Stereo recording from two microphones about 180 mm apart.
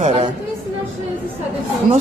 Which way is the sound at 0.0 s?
35° right (ahead or behind).